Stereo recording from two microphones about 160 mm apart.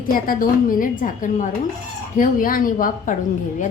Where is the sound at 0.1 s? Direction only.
60° left (ahead or behind).